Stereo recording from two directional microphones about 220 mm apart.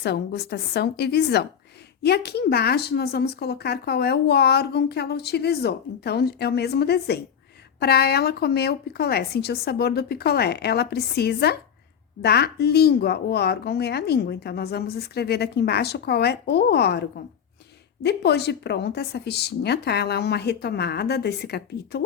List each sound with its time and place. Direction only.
0.0 s speech: 50° left (ahead or behind)